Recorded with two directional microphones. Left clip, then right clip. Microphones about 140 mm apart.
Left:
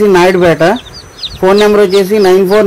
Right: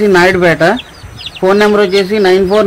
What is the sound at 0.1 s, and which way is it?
Speech, 35° left (ahead or behind).